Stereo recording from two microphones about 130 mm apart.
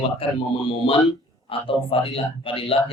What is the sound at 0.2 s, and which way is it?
Speech, 45° left (ahead or behind).